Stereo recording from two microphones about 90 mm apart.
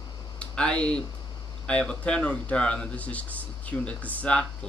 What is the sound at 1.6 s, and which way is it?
Speech, 10° left (ahead or behind).